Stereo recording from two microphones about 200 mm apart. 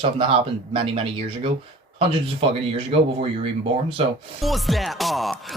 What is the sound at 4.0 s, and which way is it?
Speech, 30° right (ahead or behind).